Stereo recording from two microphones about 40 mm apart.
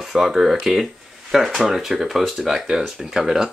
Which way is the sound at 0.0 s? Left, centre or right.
Centre.